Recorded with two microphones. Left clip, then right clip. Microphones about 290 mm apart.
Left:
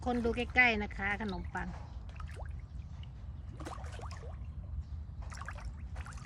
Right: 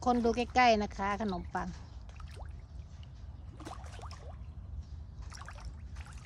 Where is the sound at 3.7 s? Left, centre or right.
Centre.